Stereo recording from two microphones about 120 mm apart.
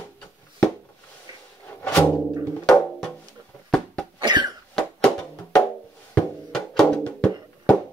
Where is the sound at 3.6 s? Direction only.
5° left (ahead or behind).